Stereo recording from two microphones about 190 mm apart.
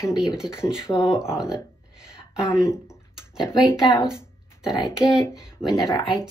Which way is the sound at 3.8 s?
20° left (ahead or behind).